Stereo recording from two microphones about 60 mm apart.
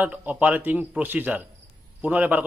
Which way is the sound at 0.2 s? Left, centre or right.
Right.